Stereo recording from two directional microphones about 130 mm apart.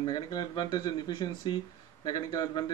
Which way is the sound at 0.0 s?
35° left (ahead or behind).